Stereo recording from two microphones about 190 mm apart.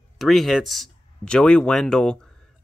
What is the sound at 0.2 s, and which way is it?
Speech, centre (ahead or behind).